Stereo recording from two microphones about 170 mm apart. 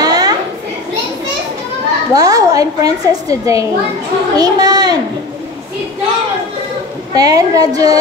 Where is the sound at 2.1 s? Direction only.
20° right (ahead or behind).